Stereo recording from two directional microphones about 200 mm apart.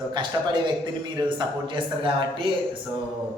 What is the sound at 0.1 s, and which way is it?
Speech, 20° right (ahead or behind).